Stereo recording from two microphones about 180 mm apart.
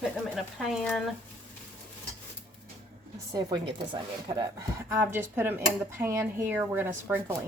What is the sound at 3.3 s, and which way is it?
A woman's voice, 25° right (ahead or behind).